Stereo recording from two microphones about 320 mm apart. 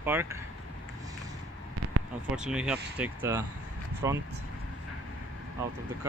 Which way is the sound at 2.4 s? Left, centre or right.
Centre.